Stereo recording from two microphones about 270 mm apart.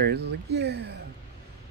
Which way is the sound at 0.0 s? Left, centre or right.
Right.